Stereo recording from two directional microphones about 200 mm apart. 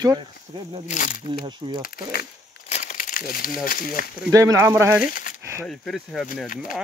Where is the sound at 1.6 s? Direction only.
25° right (ahead or behind).